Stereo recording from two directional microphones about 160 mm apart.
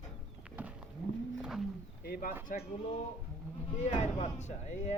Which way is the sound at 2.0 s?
65° left (ahead or behind).